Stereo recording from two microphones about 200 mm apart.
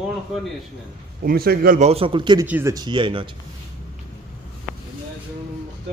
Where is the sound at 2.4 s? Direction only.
10° right (ahead or behind).